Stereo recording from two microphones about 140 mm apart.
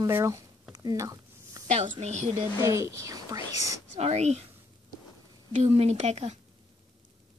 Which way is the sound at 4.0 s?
50° right (ahead or behind).